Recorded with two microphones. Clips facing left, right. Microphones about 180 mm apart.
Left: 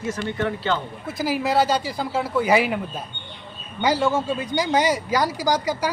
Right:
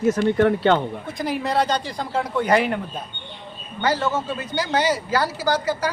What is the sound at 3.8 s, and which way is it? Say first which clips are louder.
Speech: left 2 dB; 10° left (ahead or behind).